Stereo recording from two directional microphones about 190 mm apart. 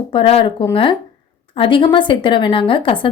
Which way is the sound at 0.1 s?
30° left (ahead or behind).